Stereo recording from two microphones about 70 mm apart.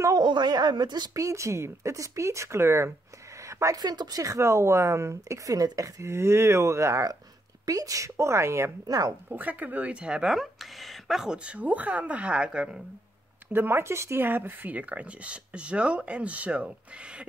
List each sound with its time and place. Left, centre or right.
0.2 s a woman's voice: right
1.1 s speech: right
3.4 s a woman's voice: right
3.8 s speech: right
4.2 s speech: right
8.8 s speech: right
9.3 s speech: right
13.5 s speech: right